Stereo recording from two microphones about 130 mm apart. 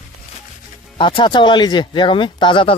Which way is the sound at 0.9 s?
40° left (ahead or behind).